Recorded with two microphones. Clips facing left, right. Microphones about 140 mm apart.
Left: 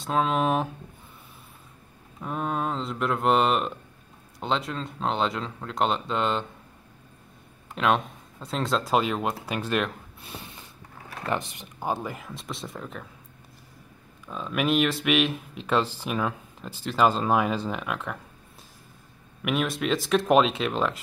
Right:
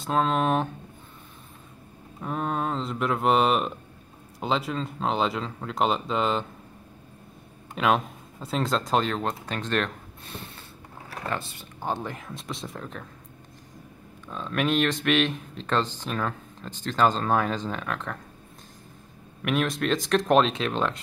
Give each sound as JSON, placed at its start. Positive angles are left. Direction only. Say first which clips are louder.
{"t": 0.0, "sound": "speech", "louder": "even", "side_deg": 0}
{"t": 2.1, "sound": "speech", "louder": "even", "side_deg": 0}
{"t": 7.7, "sound": "speech", "louder": "even", "side_deg": 0}
{"t": 11.9, "sound": "speech", "louder": "left 1 dB", "side_deg": 5}
{"t": 14.2, "sound": "speech", "louder": "even", "side_deg": 5}
{"t": 19.4, "sound": "speech", "louder": "right 1 dB", "side_deg": 0}